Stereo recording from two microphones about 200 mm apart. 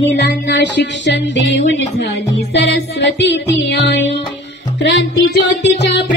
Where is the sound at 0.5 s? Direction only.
60° left (ahead or behind).